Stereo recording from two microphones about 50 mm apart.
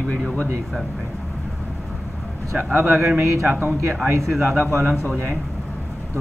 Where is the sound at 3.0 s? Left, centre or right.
Right.